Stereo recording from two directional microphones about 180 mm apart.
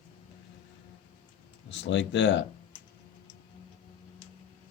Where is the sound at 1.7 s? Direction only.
80° left.